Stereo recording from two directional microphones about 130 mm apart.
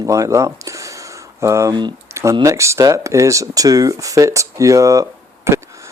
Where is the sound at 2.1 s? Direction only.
20° right (ahead or behind).